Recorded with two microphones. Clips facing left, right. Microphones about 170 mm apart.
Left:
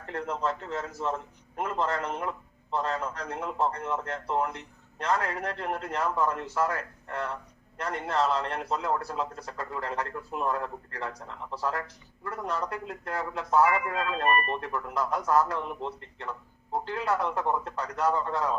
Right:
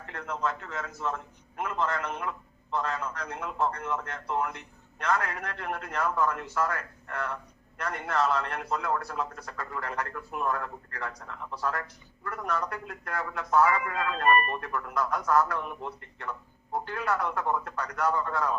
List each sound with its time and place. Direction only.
0.0 s a man's voice: 35° left (ahead or behind)